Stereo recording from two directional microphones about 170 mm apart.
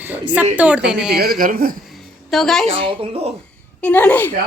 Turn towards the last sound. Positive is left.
turn(degrees=10)  # may be behind; listen again after turning